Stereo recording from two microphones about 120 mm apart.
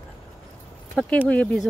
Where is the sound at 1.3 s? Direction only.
10° left (ahead or behind).